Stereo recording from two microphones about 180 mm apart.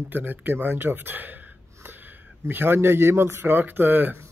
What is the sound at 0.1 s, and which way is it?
Speech, 10° right (ahead or behind).